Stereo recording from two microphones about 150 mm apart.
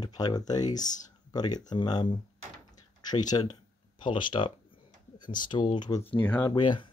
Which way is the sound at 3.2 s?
25° left (ahead or behind).